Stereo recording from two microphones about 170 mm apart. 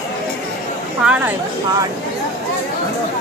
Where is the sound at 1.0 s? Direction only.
5° right (ahead or behind).